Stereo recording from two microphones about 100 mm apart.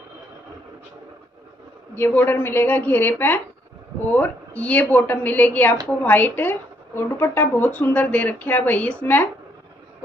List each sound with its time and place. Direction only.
2.0 s a woman's voice: 20° left (ahead or behind)